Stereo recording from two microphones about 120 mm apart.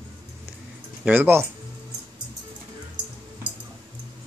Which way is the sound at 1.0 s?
15° right (ahead or behind).